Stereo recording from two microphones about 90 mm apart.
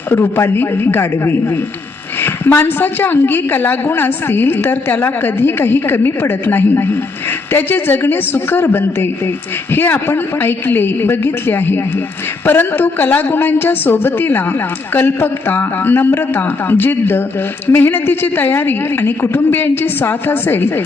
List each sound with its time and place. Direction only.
0.1 s a woman's voice: 25° left (ahead or behind)